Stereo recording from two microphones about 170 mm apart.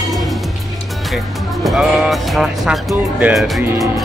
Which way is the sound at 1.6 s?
Centre (ahead or behind).